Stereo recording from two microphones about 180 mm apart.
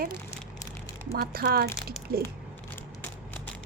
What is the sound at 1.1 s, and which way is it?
Speech, 55° right (ahead or behind).